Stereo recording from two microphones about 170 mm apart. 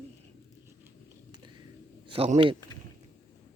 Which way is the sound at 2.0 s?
35° right (ahead or behind).